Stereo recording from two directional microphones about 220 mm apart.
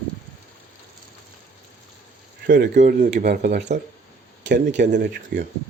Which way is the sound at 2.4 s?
40° right (ahead or behind).